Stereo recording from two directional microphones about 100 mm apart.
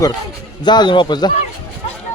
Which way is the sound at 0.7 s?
50° left (ahead or behind).